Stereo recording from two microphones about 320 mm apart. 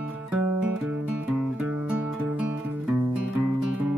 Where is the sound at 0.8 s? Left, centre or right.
Centre.